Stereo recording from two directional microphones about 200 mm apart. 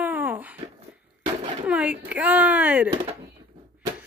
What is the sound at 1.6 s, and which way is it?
Speech, 5° right (ahead or behind).